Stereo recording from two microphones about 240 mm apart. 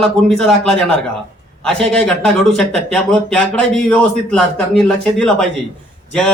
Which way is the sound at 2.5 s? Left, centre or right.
Centre.